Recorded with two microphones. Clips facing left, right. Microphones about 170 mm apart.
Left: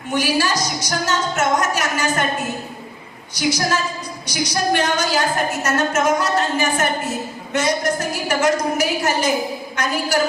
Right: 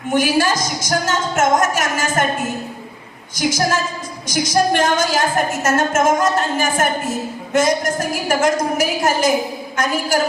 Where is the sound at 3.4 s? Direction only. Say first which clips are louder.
Right 2 dB; 45° right (ahead or behind).